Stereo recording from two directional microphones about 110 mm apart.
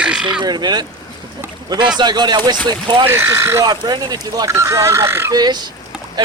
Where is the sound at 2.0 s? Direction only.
40° right (ahead or behind).